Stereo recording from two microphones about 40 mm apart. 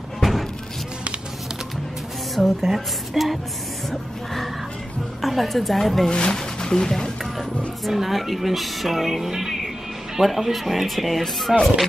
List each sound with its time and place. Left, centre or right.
0.2 s a sound: centre
2.3 s speech: centre
6.0 s speech: centre
7.8 s speech: centre